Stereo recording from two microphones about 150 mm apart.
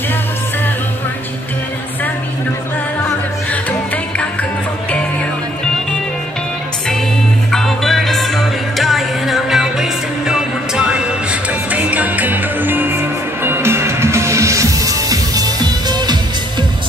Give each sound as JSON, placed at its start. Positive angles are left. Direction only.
{"t": 7.5, "sound": "music", "side_deg": 0}